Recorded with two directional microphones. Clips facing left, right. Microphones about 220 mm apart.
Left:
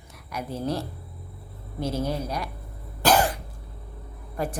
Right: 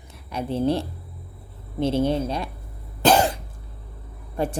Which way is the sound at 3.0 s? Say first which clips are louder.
Right 3 dB; 25° right (ahead or behind).